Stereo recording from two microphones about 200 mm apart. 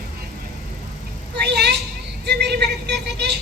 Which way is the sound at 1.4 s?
55° right (ahead or behind).